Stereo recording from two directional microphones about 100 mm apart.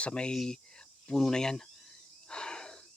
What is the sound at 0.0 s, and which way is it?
Speech, 10° left (ahead or behind).